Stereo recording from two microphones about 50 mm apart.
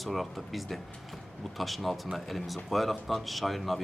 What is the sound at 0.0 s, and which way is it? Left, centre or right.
Speech, centre.